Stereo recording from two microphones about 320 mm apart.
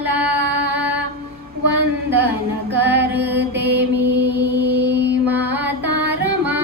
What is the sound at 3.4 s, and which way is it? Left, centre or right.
Mantra, right.